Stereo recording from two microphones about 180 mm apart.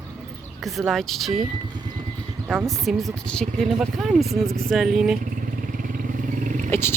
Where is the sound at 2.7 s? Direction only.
Centre (ahead or behind).